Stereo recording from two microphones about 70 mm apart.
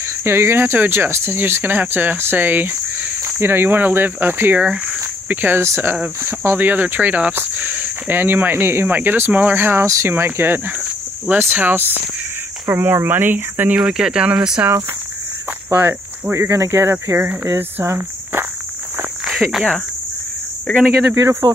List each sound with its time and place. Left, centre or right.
0.0 s speech: right
4.6 s speech: centre
5.6 s speech: right
13.7 s speech: centre
15.7 s cricket: right
16.3 s speech: right
19.2 s cricket: centre
21.1 s speech: right